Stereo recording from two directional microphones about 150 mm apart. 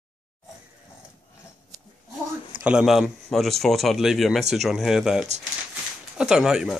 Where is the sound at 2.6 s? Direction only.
5° right (ahead or behind).